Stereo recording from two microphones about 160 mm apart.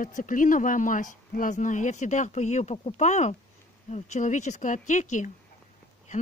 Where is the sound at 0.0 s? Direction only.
55° left (ahead or behind).